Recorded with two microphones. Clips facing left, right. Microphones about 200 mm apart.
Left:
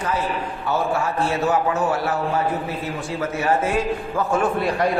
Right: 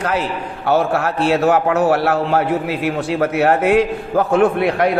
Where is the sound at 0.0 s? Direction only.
75° right (ahead or behind).